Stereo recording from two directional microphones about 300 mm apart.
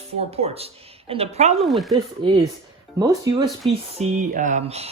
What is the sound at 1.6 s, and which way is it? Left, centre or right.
Speech, centre.